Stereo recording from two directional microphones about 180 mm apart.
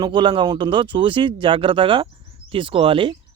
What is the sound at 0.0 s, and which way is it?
Speech, 25° right (ahead or behind).